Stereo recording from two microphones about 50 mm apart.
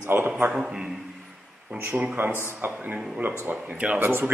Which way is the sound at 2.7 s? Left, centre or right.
Right.